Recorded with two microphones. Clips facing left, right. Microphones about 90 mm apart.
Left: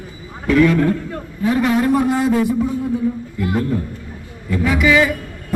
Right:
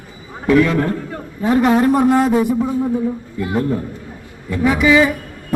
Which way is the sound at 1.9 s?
45° right (ahead or behind).